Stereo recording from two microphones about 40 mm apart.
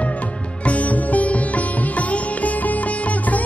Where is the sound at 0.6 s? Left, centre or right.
Left.